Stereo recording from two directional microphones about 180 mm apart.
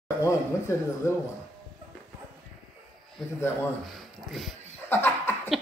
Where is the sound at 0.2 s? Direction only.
15° left (ahead or behind).